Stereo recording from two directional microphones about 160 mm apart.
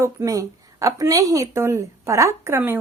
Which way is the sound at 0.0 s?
20° right (ahead or behind).